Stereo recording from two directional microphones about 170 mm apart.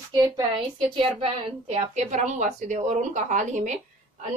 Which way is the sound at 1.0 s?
30° right (ahead or behind).